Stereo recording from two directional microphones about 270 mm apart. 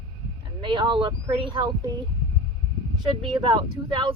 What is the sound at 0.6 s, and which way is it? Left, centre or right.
Speech, centre.